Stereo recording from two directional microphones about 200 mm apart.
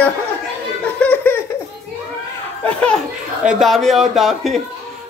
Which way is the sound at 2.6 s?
5° left (ahead or behind).